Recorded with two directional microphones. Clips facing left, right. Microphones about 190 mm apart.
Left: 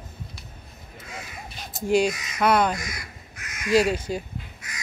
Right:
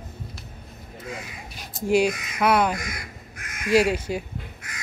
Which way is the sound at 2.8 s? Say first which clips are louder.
Right 2 dB; 55° right (ahead or behind).